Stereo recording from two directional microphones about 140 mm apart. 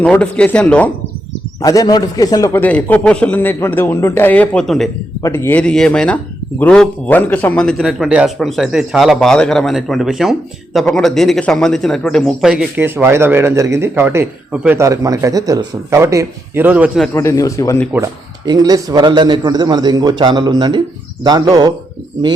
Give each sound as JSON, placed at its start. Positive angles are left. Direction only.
{"t": 0.0, "sound": "a man's voice", "side_deg": 10}
{"t": 1.6, "sound": "a man's voice", "side_deg": 25}
{"t": 2.6, "sound": "a man's voice", "side_deg": 10}
{"t": 5.2, "sound": "a man's voice", "side_deg": 20}
{"t": 12.7, "sound": "speech", "side_deg": -15}
{"t": 14.8, "sound": "a man's voice", "side_deg": -25}
{"t": 16.6, "sound": "speech", "side_deg": -10}
{"t": 17.2, "sound": "a man's voice", "side_deg": 25}
{"t": 18.4, "sound": "a man's voice", "side_deg": -30}